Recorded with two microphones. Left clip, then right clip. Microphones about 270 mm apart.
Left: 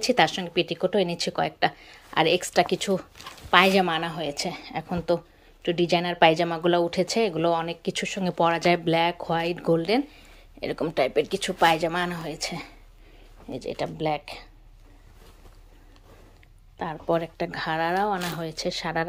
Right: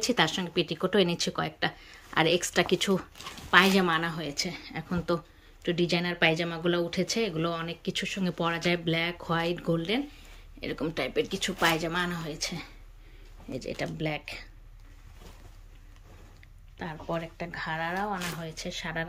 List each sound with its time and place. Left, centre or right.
0.0 s speech: centre
16.7 s speech: centre